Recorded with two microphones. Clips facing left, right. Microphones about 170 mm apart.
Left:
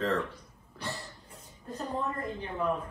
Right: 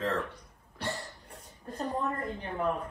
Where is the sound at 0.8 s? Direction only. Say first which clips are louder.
Right 3 dB; 65° right (ahead or behind).